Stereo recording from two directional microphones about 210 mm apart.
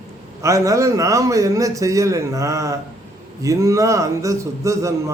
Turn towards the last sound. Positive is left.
turn(degrees=-15)  # may be behind; listen again after turning